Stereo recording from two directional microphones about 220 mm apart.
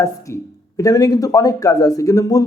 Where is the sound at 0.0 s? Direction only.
15° left (ahead or behind).